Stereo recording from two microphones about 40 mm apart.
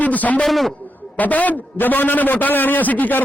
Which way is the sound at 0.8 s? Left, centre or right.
Left.